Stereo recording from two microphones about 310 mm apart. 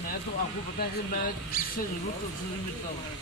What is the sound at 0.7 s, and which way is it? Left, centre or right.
Speech, left.